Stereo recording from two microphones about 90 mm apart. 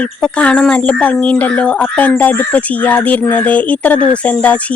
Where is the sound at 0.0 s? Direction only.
15° left (ahead or behind).